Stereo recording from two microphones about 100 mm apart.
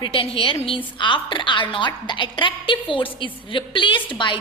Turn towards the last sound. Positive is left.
turn(degrees=55)  # may be behind; listen again after turning